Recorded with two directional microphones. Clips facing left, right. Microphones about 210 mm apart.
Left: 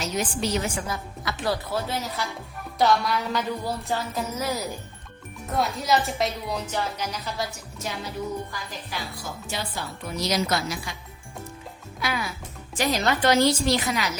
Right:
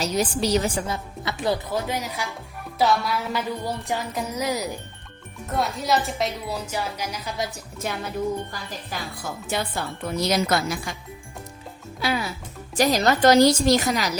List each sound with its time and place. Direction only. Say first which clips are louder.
0.0 s speech: right 4 dB; 35° right (ahead or behind); by 3.4 s 5° right (ahead or behind)
3.8 s speech: right 1 dB; 15° right (ahead or behind)
5.5 s speech: even; centre (ahead or behind)
7.8 s speech: right 4 dB; 55° right (ahead or behind)
11.9 s a woman's voice: right 4 dB; 30° right (ahead or behind)